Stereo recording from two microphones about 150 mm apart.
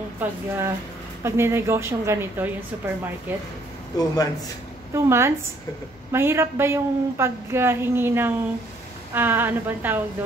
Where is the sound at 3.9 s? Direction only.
25° left (ahead or behind).